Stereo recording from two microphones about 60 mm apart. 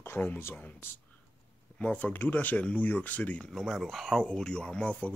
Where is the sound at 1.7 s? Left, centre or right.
Centre.